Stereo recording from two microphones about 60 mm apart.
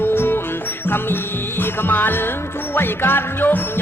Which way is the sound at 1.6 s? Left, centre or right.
Left.